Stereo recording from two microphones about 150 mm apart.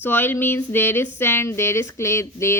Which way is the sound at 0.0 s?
15° left (ahead or behind).